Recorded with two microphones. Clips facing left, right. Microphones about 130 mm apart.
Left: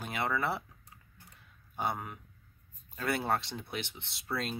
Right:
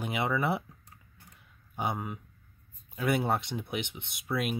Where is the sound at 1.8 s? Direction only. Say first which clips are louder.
Right 2 dB; 15° right (ahead or behind).